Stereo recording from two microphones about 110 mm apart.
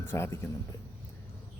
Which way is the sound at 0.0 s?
20° left (ahead or behind).